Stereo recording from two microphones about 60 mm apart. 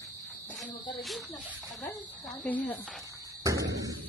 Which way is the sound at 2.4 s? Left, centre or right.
Left.